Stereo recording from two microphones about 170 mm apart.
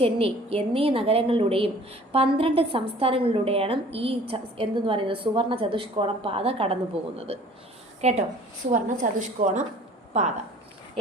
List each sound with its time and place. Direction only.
0.0 s a woman's voice: 35° right (ahead or behind)
7.0 s speech: 5° right (ahead or behind)
8.0 s a woman's voice: 40° right (ahead or behind)